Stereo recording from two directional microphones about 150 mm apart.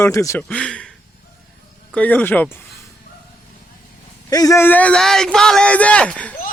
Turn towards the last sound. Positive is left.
turn(degrees=5)  # may be behind; listen again after turning